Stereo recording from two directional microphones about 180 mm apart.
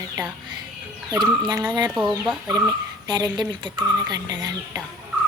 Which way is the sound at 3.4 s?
25° right (ahead or behind).